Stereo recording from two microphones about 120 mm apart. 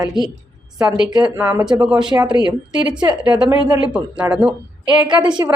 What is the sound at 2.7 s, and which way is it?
Speech, 40° right (ahead or behind).